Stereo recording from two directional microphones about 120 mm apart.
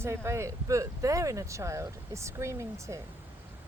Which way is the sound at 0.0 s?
20° right (ahead or behind).